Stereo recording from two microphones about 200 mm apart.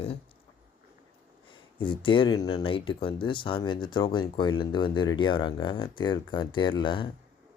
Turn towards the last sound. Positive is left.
turn(degrees=25)  # may be behind; listen again after turning